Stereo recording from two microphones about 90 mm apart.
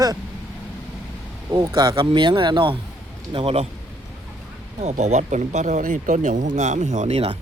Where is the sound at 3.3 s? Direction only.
90° right.